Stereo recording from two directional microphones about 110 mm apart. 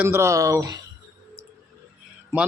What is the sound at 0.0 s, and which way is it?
Speech, 25° right (ahead or behind).